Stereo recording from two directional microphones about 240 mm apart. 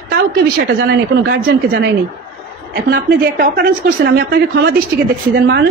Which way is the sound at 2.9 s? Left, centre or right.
Right.